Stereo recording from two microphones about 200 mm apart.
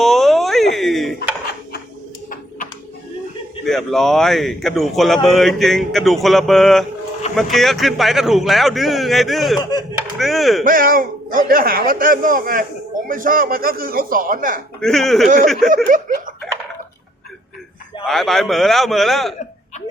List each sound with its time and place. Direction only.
0.0 s a sound: centre (ahead or behind)
3.7 s speech: centre (ahead or behind)
10.2 s chop: centre (ahead or behind)
10.6 s a man's voice: 45° right (ahead or behind)
14.8 s speech: centre (ahead or behind)
15.7 s snicker: 40° right (ahead or behind)
18.0 s speech: centre (ahead or behind)